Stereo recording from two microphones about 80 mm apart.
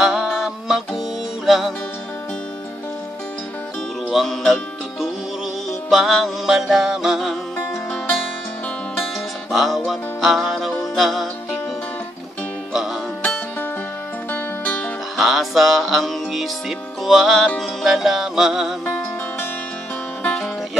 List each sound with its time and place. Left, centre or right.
0.0 s music: centre
4.1 s music: centre
5.7 s music: centre
9.5 s music: centre
13.2 s music: left
15.1 s music: centre